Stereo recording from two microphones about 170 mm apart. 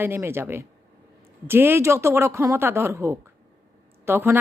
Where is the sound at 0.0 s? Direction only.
15° right (ahead or behind).